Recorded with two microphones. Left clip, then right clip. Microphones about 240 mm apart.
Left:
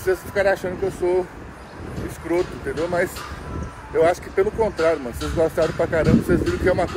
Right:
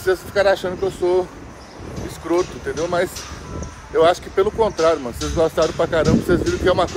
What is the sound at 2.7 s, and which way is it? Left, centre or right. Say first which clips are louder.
Speech: right 2 dB; centre.